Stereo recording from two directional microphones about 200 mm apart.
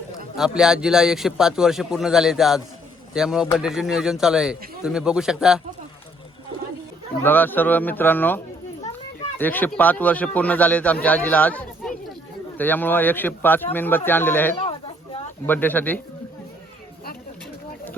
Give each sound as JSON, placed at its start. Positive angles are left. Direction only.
{"t": 0.3, "sound": "a man's voice", "side_deg": -5}
{"t": 7.2, "sound": "a man's voice", "side_deg": 10}
{"t": 9.4, "sound": "a man's voice", "side_deg": 10}
{"t": 14.6, "sound": "a sound", "side_deg": 25}
{"t": 15.4, "sound": "a man's voice", "side_deg": 10}